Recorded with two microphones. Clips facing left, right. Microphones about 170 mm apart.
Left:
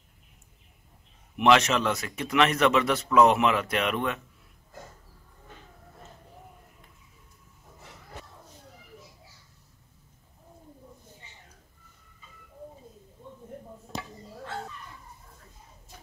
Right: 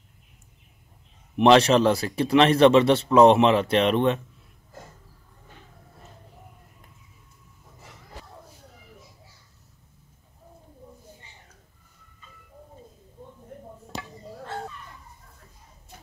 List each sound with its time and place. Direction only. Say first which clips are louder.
1.4 s a man's voice: right 5 dB; 35° right (ahead or behind)